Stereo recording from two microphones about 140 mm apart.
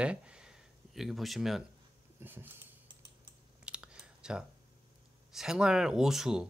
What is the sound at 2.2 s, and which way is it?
Speech, 15° right (ahead or behind).